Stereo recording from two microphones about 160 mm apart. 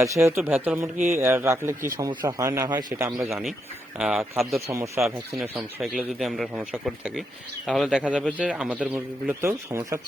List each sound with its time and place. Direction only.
0.0 s a man's voice: 20° right (ahead or behind)
3.9 s a man's voice: 5° right (ahead or behind); by 10.0 s 20° right (ahead or behind)